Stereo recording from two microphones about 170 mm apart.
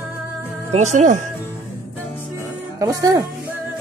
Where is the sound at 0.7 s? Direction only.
45° right (ahead or behind).